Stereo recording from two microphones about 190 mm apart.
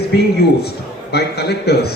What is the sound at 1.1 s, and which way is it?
Speech, 60° left (ahead or behind).